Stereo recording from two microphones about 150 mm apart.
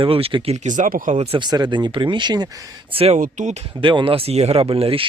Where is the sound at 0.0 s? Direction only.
40° right (ahead or behind); by 1.1 s 65° right (ahead or behind).